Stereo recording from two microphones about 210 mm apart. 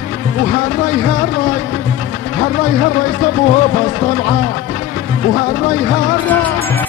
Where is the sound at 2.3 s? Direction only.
40° left (ahead or behind).